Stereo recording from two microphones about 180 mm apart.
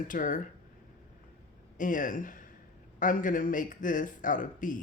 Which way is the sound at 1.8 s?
45° left (ahead or behind).